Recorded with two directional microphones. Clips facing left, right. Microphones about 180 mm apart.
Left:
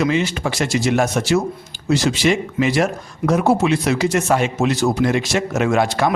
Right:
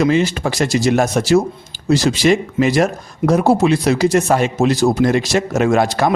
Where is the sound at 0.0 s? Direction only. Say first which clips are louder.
Right 4 dB; 40° right (ahead or behind).